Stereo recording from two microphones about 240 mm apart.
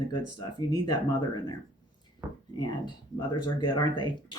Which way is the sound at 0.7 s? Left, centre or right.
Centre.